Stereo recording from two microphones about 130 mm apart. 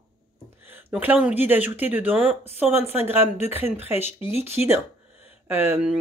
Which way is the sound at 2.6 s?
50° left (ahead or behind).